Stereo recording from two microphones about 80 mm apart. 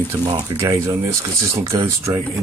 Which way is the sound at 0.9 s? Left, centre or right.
Right.